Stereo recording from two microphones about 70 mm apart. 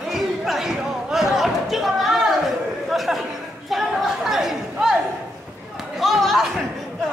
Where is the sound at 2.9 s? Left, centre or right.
Centre.